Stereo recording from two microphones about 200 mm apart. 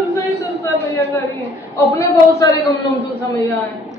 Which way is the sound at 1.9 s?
15° left (ahead or behind).